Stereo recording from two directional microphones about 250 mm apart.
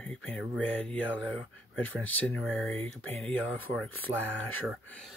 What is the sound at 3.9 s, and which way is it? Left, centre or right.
Speech, left.